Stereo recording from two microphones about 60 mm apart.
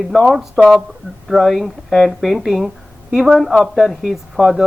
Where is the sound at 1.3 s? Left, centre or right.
Centre.